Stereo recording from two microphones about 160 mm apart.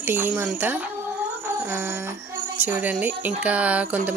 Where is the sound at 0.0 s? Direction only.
15° right (ahead or behind).